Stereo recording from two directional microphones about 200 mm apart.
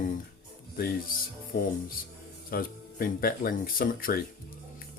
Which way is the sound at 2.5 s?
45° left (ahead or behind).